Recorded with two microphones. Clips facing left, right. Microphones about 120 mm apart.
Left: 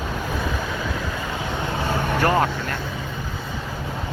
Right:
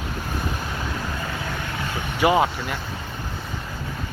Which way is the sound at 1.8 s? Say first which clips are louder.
Left 6 dB; 45° left (ahead or behind).